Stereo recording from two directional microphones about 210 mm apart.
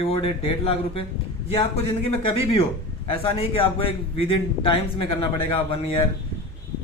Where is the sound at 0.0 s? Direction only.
25° left (ahead or behind).